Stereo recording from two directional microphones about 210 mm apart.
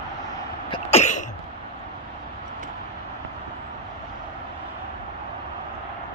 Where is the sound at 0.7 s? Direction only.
30° left (ahead or behind).